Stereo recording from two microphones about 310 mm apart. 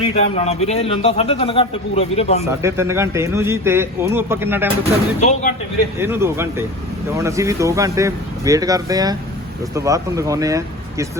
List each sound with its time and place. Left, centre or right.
0.0 s a man's voice: centre
2.4 s speech: centre
5.2 s a man's voice: left
6.0 s speech: centre